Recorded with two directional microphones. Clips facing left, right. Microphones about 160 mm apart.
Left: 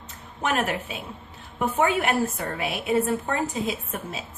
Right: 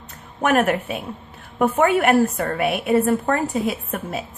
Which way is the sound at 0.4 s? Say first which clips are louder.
Right 7 dB; 60° right (ahead or behind).